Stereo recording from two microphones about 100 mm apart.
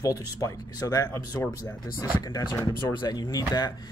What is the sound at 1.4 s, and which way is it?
Speech, 25° left (ahead or behind).